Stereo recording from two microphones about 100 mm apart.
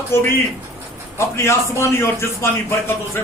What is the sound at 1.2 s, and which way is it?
A man's voice, 30° left (ahead or behind).